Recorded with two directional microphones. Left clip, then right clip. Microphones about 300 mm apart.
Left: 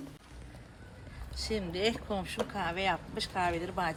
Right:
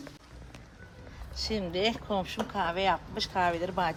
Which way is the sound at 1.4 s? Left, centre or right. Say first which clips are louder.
Right 2 dB; right.